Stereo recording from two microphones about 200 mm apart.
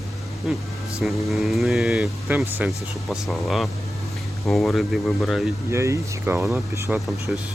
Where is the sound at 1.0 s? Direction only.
Centre (ahead or behind).